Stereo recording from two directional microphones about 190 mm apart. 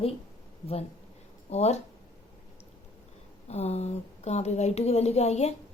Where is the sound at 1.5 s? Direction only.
35° left (ahead or behind).